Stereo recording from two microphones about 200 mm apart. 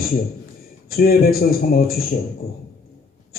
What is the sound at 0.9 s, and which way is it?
A man's voice, 50° left (ahead or behind).